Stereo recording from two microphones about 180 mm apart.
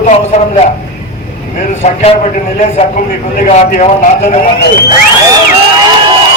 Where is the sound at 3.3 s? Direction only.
40° left (ahead or behind).